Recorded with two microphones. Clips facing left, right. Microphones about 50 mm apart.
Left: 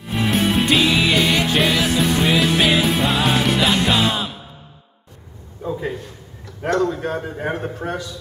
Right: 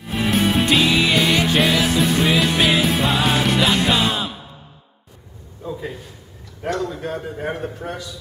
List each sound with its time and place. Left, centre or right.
0.1 s music: centre
5.6 s a sound: centre
6.7 s a man's voice: centre